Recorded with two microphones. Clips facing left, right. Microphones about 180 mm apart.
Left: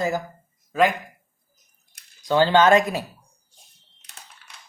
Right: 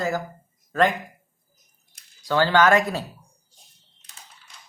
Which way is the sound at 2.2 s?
20° left (ahead or behind).